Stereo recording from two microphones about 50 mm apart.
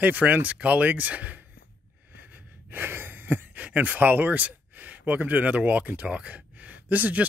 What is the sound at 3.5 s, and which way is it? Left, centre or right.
Speech, right.